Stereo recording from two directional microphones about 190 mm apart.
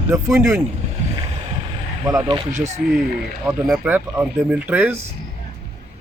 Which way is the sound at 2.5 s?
35° right (ahead or behind).